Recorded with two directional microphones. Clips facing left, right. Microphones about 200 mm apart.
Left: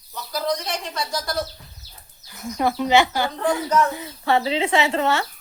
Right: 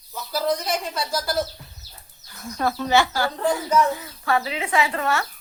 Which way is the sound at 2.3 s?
15° left (ahead or behind).